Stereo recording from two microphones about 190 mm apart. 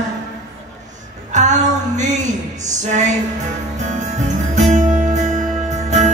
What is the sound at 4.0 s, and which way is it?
Music, 40° right (ahead or behind).